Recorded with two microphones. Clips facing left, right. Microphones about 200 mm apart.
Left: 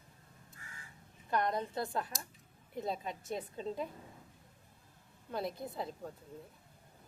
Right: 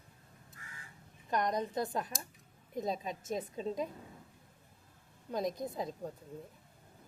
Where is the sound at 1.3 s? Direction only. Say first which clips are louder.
Right 1 dB; 15° right (ahead or behind).